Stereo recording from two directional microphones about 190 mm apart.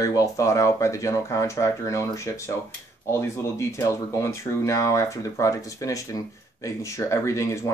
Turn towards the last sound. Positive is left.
turn(degrees=15)  # may be behind; listen again after turning